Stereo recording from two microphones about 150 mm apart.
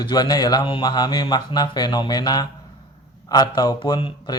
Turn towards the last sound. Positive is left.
turn(degrees=30)  # may be behind; listen again after turning